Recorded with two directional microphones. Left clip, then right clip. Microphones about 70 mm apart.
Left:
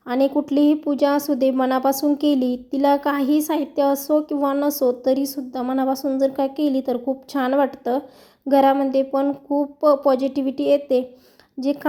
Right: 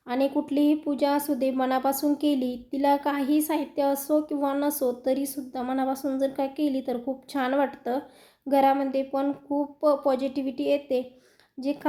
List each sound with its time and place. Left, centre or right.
0.1 s a woman's voice: left
6.3 s a woman's voice: left
8.4 s a woman's voice: left